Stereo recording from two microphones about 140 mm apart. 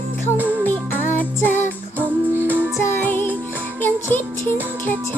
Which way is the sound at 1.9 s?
15° right (ahead or behind).